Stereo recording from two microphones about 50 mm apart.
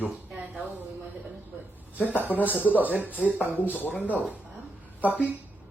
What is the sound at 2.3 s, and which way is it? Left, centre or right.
Speech, left.